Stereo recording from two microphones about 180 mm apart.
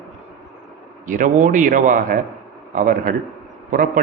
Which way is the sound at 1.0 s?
45° right (ahead or behind).